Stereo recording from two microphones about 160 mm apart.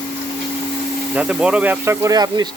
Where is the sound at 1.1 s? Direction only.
5° right (ahead or behind).